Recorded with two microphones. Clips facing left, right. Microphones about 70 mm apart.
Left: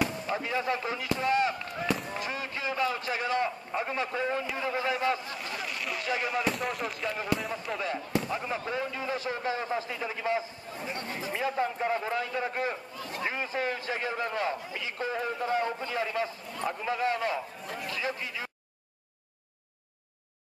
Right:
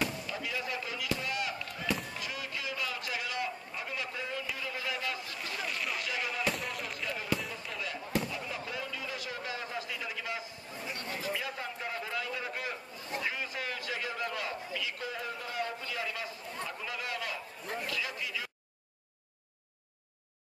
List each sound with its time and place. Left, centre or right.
0.3 s speech: left
1.0 s chop: left
2.1 s a sound: left
4.6 s a man's voice: left
5.4 s a sound: centre
6.0 s a man's voice: left
6.4 s a sound: centre
7.2 s speech: left
7.8 s a man's voice: left